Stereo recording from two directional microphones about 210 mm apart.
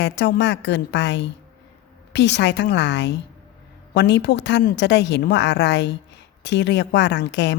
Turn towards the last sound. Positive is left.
turn(degrees=55)  # may be behind; listen again after turning